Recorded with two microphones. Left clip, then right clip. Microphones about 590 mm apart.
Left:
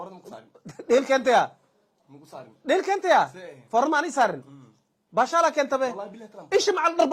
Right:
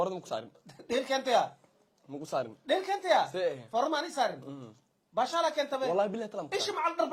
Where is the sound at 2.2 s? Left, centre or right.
Right.